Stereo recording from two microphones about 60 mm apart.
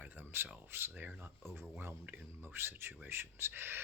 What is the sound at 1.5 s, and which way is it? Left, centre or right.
Speech, right.